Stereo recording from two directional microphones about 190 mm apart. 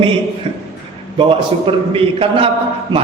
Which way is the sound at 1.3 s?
30° right (ahead or behind).